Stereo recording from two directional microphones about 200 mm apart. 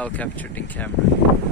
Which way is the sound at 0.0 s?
5° left (ahead or behind).